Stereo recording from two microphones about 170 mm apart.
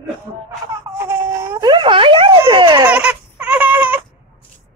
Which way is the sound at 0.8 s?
15° right (ahead or behind).